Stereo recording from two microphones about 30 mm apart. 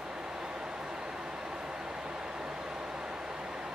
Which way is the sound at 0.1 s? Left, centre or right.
Right.